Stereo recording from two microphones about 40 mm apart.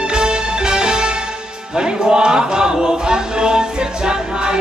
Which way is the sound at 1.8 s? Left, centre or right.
Centre.